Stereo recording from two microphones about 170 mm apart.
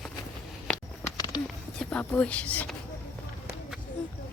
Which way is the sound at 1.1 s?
25° left (ahead or behind).